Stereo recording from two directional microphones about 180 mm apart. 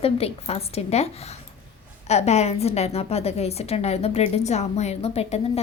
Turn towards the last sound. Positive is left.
turn(degrees=35)  # may be behind; listen again after turning